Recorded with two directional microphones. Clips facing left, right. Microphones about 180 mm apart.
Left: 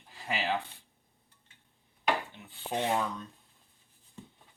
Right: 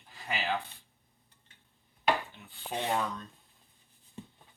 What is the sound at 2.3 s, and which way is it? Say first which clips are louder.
Rub: left 2 dB; 20° left (ahead or behind).